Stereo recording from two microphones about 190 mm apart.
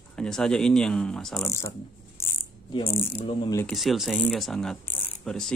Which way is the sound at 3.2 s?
15° left (ahead or behind).